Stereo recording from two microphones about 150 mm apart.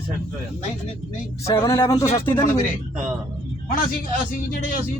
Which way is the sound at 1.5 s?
20° left (ahead or behind).